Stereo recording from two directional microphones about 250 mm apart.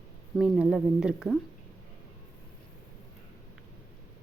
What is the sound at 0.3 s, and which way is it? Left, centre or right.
Speech, centre.